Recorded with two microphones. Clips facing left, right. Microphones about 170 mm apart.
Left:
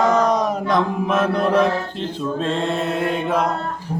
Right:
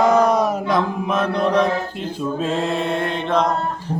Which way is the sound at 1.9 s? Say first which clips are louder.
Even; 5° right (ahead or behind).